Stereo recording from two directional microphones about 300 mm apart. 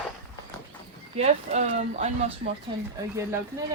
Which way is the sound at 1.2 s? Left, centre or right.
Right.